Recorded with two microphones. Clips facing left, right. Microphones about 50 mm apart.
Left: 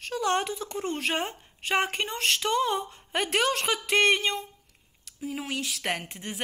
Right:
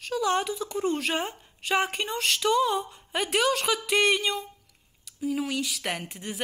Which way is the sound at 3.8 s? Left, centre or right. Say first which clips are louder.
Left 2 dB; left.